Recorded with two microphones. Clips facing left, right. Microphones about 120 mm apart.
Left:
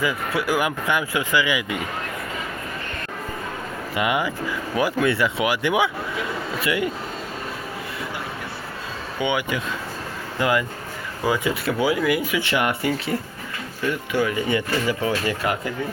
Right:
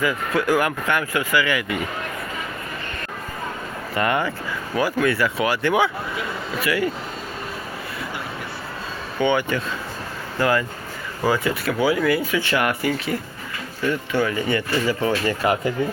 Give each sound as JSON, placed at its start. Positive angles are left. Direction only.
{"t": 0.0, "sound": "speech", "side_deg": 10}
{"t": 3.9, "sound": "speech", "side_deg": 10}
{"t": 4.8, "sound": "speech", "side_deg": 20}
{"t": 9.1, "sound": "speech", "side_deg": 10}
{"t": 14.1, "sound": "speech", "side_deg": 15}